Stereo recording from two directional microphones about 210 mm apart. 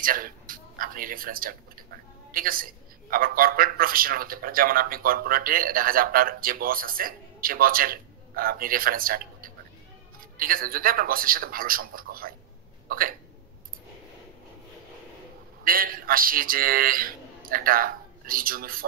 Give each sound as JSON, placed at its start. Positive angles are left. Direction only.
{"t": 0.0, "sound": "a man's voice", "side_deg": -40}
{"t": 15.6, "sound": "a man's voice", "side_deg": -45}